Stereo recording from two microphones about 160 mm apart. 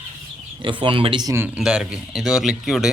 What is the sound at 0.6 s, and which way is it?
Speech, 30° right (ahead or behind).